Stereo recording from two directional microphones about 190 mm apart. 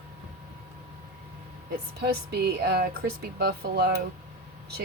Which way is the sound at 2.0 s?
60° right (ahead or behind).